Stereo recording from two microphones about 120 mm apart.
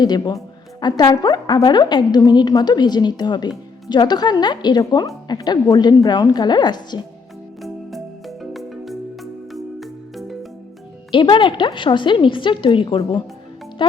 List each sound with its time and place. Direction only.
0.0 s a woman's voice: 35° left (ahead or behind)
7.6 s music: centre (ahead or behind)
11.1 s a woman's voice: 40° left (ahead or behind)